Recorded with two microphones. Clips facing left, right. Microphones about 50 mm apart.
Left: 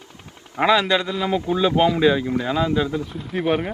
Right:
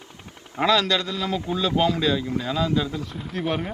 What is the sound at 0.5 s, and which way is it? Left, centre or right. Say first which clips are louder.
A man's voice: left 3 dB; left.